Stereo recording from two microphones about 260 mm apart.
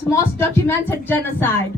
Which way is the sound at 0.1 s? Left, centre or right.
Centre.